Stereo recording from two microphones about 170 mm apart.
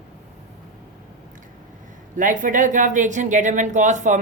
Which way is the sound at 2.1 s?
50° right (ahead or behind).